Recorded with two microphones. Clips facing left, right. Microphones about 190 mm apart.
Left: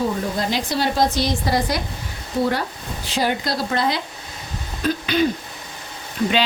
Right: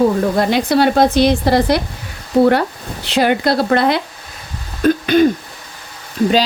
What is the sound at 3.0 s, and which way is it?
Speech, 65° right (ahead or behind).